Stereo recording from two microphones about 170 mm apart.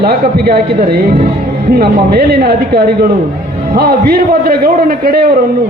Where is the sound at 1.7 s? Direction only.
65° right (ahead or behind).